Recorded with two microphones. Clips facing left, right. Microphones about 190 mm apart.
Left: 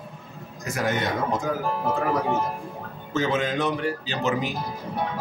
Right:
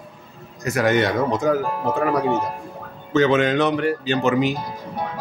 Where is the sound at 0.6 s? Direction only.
75° right (ahead or behind).